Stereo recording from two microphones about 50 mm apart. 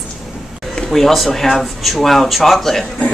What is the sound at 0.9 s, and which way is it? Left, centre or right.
Speech, centre.